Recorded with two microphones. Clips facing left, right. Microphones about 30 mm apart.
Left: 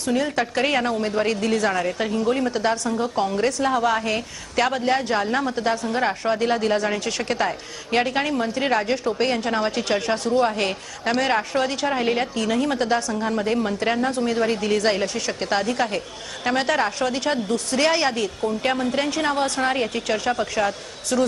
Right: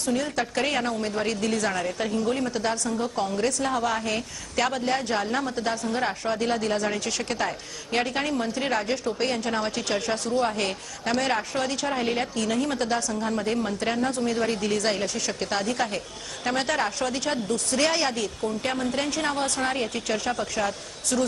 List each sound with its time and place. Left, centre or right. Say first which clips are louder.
0.0 s a woman's voice: left 4 dB; centre